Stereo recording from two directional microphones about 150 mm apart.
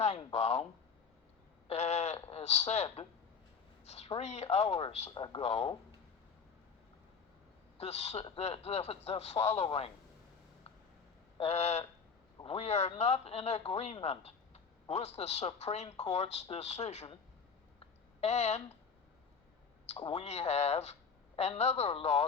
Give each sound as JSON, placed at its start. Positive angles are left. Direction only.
{"t": 0.0, "sound": "a man's voice", "side_deg": 40}
{"t": 1.6, "sound": "a sound", "side_deg": 45}
{"t": 3.8, "sound": "a man's voice", "side_deg": 45}
{"t": 5.1, "sound": "speech", "side_deg": 30}
{"t": 7.8, "sound": "a man's voice", "side_deg": 45}
{"t": 11.3, "sound": "a man's voice", "side_deg": 45}
{"t": 17.7, "sound": "a sound", "side_deg": 45}
{"t": 19.9, "sound": "a man's voice", "side_deg": 45}